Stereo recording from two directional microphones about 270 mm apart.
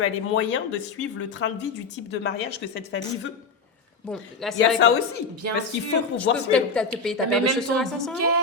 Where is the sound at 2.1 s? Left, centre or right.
Left.